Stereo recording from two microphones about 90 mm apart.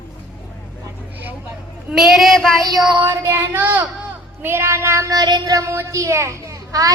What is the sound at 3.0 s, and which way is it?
A child's voice, 30° right (ahead or behind).